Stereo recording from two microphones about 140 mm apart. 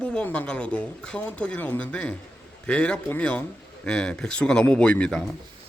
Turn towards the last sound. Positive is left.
turn(degrees=5)  # may be behind; listen again after turning